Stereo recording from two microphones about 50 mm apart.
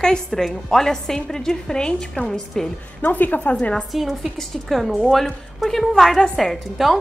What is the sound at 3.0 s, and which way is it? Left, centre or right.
Speech, left.